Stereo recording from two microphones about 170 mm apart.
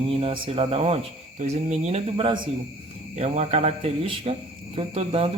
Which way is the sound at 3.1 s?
40° right (ahead or behind).